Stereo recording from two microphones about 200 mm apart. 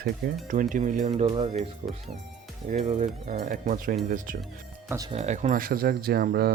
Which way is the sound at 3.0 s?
40° right (ahead or behind).